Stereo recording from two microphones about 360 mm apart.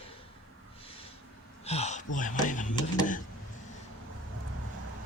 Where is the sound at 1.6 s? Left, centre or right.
Centre.